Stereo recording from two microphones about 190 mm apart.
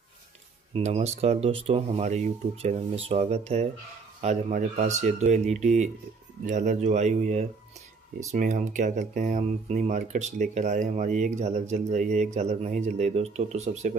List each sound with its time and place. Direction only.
0.7 s speech: 35° right (ahead or behind)